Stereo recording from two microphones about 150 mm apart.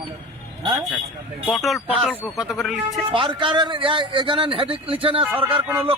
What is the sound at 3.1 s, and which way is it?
A man's voice, 35° right (ahead or behind).